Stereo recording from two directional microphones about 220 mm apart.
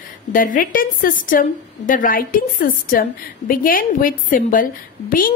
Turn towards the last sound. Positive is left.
turn(degrees=40)  # may be behind; listen again after turning